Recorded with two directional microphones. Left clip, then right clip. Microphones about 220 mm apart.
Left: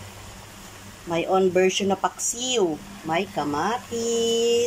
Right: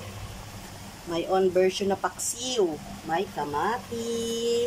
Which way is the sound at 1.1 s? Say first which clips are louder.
Left 3 dB; 10° left (ahead or behind).